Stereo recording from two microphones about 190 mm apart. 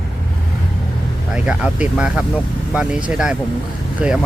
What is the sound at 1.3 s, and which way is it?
Speech, 5° right (ahead or behind).